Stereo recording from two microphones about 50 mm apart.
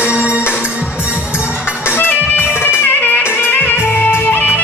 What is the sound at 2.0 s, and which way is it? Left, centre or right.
Music, left.